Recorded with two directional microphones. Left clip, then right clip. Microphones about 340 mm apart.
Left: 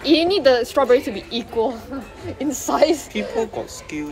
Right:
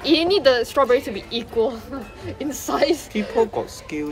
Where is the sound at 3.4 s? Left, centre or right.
Centre.